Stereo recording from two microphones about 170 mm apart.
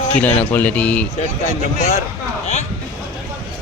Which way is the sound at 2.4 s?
40° left (ahead or behind).